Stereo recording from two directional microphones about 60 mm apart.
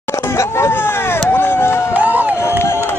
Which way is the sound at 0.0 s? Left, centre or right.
Left.